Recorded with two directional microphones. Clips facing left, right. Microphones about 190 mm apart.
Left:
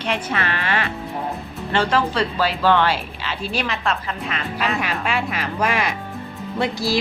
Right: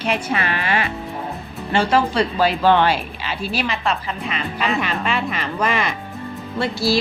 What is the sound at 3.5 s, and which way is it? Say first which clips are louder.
A woman's voice: right 1 dB; centre (ahead or behind).